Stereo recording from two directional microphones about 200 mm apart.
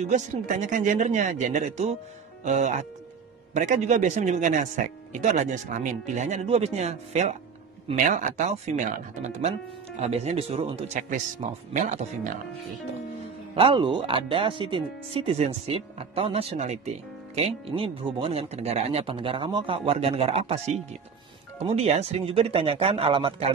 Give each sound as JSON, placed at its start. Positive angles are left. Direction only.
{"t": 0.0, "sound": "speech", "side_deg": -40}
{"t": 13.6, "sound": "speech", "side_deg": -25}